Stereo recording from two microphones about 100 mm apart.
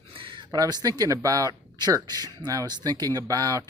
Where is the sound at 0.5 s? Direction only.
40° right (ahead or behind).